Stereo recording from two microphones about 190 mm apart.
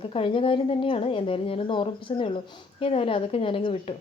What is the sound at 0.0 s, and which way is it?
Speech, 30° left (ahead or behind).